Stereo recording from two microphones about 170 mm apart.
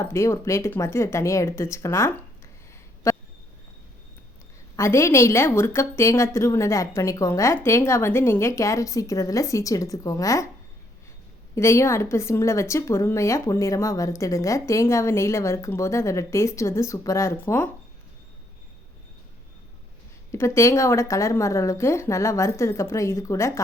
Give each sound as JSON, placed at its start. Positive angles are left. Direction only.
{"t": 0.0, "sound": "a woman's voice", "side_deg": 15}
{"t": 3.1, "sound": "a sound", "side_deg": 15}
{"t": 4.8, "sound": "a woman's voice", "side_deg": 15}
{"t": 11.5, "sound": "a woman's voice", "side_deg": 15}
{"t": 20.3, "sound": "a woman's voice", "side_deg": 15}